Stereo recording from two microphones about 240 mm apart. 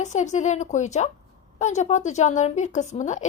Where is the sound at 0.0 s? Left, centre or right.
Left.